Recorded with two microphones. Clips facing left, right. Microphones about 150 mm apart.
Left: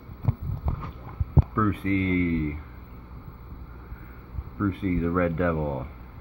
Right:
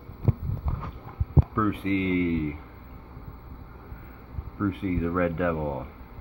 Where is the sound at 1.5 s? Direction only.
10° right (ahead or behind).